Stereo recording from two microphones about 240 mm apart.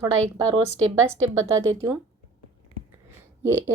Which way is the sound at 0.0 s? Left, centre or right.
Centre.